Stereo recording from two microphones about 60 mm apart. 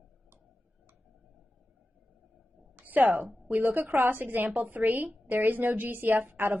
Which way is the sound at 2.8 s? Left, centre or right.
Right.